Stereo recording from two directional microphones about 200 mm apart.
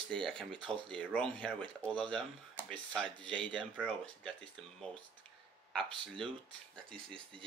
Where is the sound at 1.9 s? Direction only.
25° right (ahead or behind).